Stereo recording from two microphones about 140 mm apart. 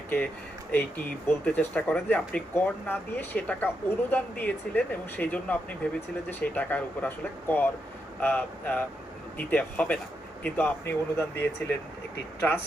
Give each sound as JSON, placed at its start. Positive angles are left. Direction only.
{"t": 0.7, "sound": "speech", "side_deg": 15}